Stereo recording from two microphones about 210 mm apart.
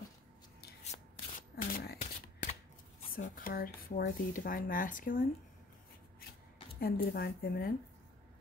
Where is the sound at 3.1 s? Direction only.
40° left (ahead or behind).